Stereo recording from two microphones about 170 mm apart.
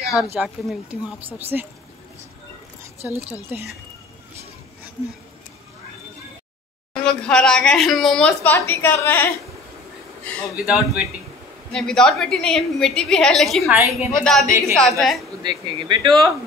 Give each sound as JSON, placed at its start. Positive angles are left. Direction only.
{"t": 0.1, "sound": "speech", "side_deg": -5}
{"t": 3.0, "sound": "speech", "side_deg": -15}
{"t": 7.0, "sound": "a woman's voice", "side_deg": 5}
{"t": 10.5, "sound": "a woman's voice", "side_deg": -5}
{"t": 15.4, "sound": "speech", "side_deg": -25}